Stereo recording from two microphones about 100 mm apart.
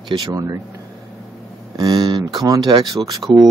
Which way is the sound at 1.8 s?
40° right (ahead or behind).